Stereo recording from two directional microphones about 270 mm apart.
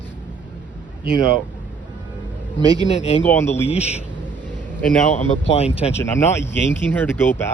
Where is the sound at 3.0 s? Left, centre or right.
Left.